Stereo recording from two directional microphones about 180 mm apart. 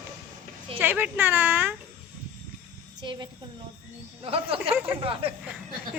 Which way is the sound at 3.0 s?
25° right (ahead or behind).